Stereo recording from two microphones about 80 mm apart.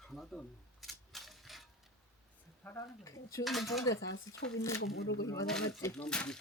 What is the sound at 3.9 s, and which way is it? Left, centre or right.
Speech, left.